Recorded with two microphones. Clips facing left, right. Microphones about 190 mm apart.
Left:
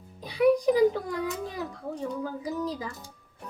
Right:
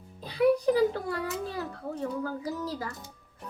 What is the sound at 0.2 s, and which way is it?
A child's voice, 15° left (ahead or behind).